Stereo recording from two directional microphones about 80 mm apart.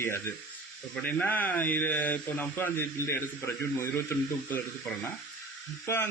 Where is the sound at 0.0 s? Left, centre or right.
Left.